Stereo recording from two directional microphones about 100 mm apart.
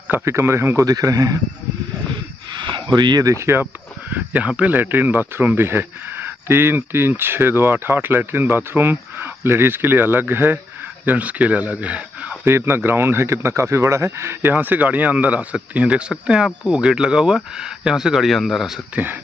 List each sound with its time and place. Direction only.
0.2 s speech: 30° right (ahead or behind)
0.8 s a man's voice: 40° right (ahead or behind)
2.6 s speech: 50° right (ahead or behind)
3.3 s speech: 25° right (ahead or behind)
4.1 s speech: 15° right (ahead or behind)
12.4 s speech: 25° right (ahead or behind); by 18.8 s centre (ahead or behind)